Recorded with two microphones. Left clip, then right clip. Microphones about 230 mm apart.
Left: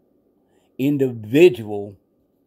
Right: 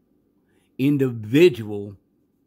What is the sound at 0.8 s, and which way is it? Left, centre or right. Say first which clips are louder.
Speech: left 1 dB; centre.